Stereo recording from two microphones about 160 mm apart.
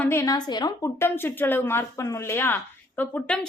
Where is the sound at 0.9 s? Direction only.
15° left (ahead or behind).